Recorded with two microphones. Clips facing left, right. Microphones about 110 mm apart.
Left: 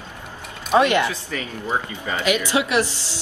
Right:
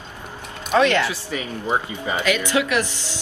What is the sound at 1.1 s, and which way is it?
Speech, 15° right (ahead or behind).